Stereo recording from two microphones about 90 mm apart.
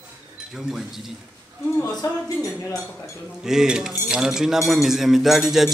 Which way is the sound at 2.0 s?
40° left (ahead or behind).